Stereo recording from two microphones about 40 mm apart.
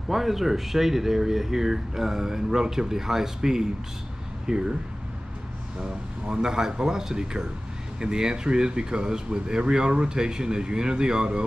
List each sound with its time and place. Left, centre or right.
0.1 s speech: centre
5.8 s speech: centre